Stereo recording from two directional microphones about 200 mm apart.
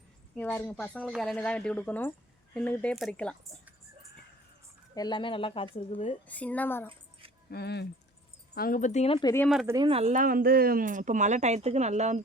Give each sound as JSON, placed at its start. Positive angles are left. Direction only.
{"t": 0.3, "sound": "speech", "side_deg": 10}
{"t": 4.9, "sound": "speech", "side_deg": 20}
{"t": 6.2, "sound": "speech", "side_deg": 5}
{"t": 7.5, "sound": "speech", "side_deg": 55}
{"t": 8.5, "sound": "speech", "side_deg": 45}
{"t": 9.6, "sound": "speech", "side_deg": -20}
{"t": 9.9, "sound": "speech", "side_deg": -35}